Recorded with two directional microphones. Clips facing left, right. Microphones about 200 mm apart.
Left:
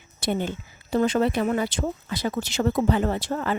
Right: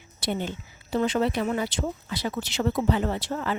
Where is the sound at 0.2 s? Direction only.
50° left (ahead or behind).